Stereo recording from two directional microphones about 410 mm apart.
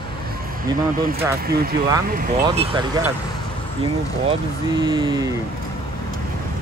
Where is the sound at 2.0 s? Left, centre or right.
Centre.